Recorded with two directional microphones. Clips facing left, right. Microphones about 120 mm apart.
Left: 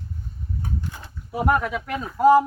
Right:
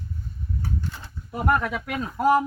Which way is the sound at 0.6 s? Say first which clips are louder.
Even; 20° left (ahead or behind).